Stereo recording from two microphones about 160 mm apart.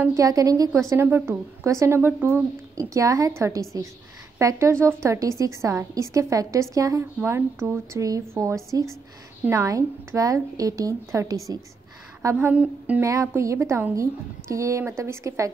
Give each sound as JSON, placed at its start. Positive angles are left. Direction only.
{"t": 0.0, "sound": "a woman's voice", "side_deg": -20}